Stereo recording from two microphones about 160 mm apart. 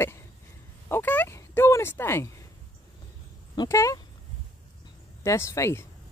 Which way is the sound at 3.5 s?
25° left (ahead or behind).